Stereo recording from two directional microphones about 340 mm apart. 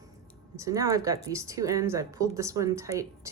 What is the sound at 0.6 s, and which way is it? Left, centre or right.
Speech, centre.